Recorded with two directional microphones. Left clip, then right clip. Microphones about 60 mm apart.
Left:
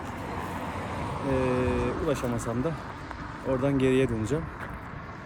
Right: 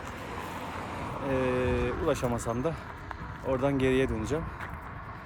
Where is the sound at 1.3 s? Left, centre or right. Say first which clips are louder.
Left 1 dB; right.